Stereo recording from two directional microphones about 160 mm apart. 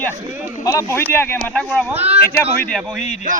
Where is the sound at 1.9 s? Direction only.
40° right (ahead or behind).